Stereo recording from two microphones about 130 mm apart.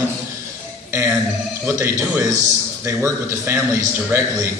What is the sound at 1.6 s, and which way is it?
A man's voice, 20° right (ahead or behind).